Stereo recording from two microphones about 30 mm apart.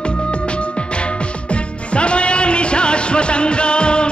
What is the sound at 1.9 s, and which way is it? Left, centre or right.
Music, left.